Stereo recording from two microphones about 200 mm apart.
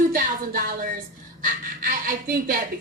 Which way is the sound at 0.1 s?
45° right (ahead or behind).